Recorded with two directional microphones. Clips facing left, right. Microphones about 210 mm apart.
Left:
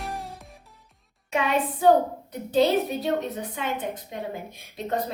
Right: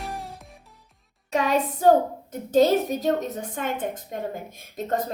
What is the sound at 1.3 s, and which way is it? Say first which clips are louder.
Music: right 2 dB; 40° right (ahead or behind).